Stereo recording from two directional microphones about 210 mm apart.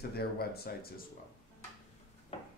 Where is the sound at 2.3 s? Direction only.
30° left (ahead or behind).